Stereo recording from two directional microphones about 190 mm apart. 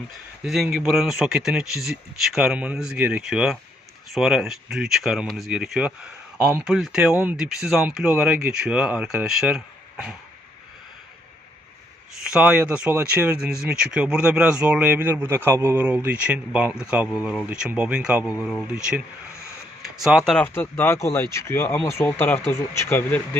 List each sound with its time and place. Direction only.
0.4 s speech: centre (ahead or behind)
12.2 s speech: 5° right (ahead or behind)
20.1 s speech: centre (ahead or behind)